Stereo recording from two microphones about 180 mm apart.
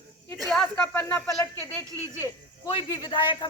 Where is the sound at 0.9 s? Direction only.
10° left (ahead or behind).